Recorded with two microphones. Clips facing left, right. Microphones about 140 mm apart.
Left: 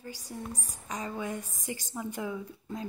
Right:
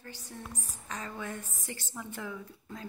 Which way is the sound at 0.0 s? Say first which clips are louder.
Left 5 dB; 10° left (ahead or behind).